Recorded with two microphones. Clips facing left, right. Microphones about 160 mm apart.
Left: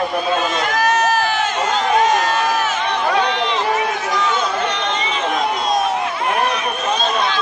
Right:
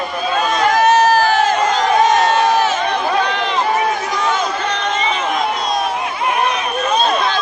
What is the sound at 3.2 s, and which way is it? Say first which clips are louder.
Run: even; 50° right (ahead or behind).